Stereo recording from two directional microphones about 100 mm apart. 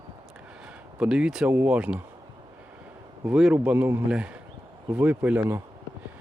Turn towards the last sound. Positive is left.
turn(degrees=-15)  # may be behind; listen again after turning